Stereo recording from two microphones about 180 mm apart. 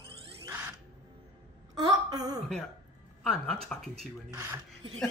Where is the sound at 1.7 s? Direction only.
20° right (ahead or behind).